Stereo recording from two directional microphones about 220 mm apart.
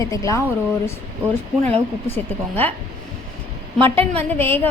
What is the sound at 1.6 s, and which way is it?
Speech, 30° right (ahead or behind).